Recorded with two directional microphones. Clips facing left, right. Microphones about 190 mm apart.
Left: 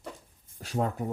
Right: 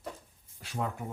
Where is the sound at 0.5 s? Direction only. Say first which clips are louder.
Left 6 dB; 40° left (ahead or behind).